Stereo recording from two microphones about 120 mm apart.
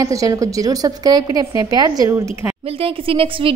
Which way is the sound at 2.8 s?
50° right (ahead or behind).